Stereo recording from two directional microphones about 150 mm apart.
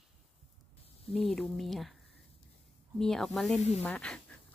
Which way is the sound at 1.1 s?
Centre (ahead or behind).